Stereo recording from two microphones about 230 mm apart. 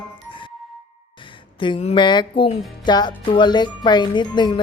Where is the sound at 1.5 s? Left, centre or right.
Left.